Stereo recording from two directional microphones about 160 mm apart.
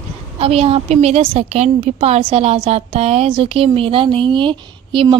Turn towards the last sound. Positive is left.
turn(degrees=-30)  # may be behind; listen again after turning